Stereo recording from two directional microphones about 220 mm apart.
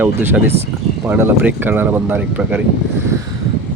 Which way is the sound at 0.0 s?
10° right (ahead or behind).